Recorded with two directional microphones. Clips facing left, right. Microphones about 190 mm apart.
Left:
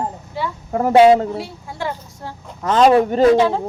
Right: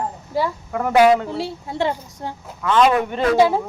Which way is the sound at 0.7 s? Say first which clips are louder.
Left 4 dB; 30° left (ahead or behind).